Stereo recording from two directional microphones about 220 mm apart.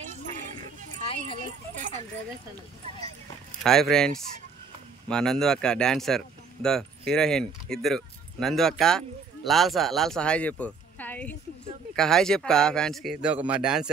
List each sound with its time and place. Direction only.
1.4 s speech: 35° right (ahead or behind)
3.6 s speech: centre (ahead or behind)